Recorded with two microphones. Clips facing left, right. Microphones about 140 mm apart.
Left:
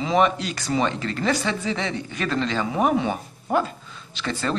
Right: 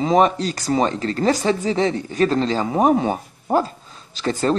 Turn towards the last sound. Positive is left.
turn(degrees=-40)  # may be behind; listen again after turning